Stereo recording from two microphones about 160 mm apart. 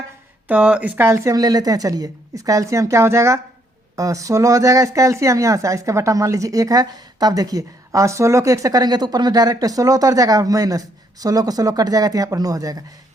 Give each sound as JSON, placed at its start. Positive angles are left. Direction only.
{"t": 0.4, "sound": "speech", "side_deg": -10}